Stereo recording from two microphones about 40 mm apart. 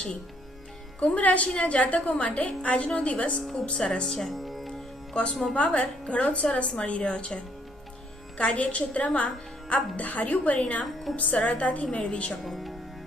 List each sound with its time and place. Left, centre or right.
0.9 s a woman's voice: left
3.5 s speech: centre
4.3 s music: centre
5.1 s speech: left
5.5 s a woman's voice: left
8.5 s a woman's voice: left
12.4 s speech: centre